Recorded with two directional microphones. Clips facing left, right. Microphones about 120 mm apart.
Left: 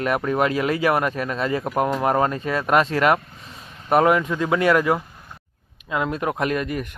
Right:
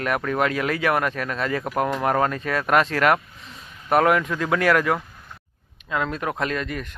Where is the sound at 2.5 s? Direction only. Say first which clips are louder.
Left 1 dB; centre (ahead or behind).